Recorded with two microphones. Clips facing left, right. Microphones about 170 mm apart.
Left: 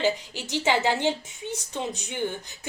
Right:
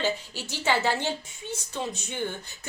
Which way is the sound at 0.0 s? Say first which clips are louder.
Left 3 dB; 15° left (ahead or behind).